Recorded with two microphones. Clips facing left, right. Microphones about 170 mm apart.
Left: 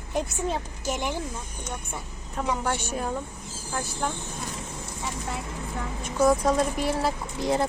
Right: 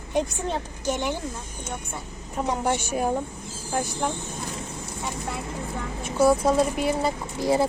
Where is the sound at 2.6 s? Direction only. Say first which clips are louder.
Right 4 dB; 10° right (ahead or behind).